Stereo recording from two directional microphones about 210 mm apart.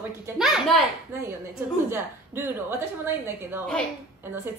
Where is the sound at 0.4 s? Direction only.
Centre (ahead or behind).